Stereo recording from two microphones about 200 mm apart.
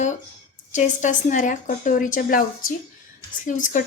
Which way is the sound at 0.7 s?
40° left (ahead or behind).